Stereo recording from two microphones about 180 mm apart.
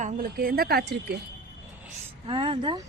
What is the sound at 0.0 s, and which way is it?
Speech, 55° right (ahead or behind).